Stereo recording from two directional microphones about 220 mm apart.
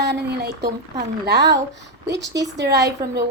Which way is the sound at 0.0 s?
50° right (ahead or behind).